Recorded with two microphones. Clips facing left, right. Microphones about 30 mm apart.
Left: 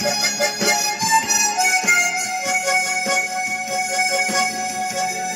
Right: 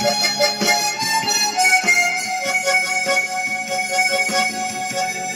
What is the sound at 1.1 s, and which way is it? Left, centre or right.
Harmonica, right.